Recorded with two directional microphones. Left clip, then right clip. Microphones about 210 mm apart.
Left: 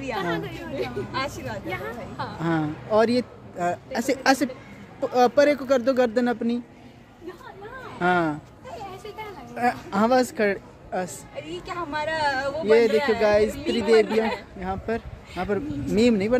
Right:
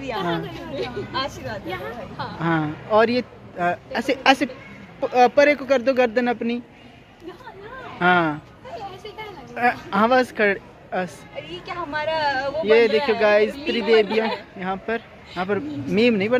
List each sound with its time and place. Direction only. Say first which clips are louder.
0.2 s speech: right 2 dB; centre (ahead or behind)
1.1 s speech: right 2 dB; 20° left (ahead or behind)
1.7 s speech: right 1 dB; 10° left (ahead or behind)
8.0 s a sound: right 4 dB; centre (ahead or behind)
11.6 s speech: right 3 dB; 15° left (ahead or behind)
12.6 s speech: right 2 dB; 5° left (ahead or behind)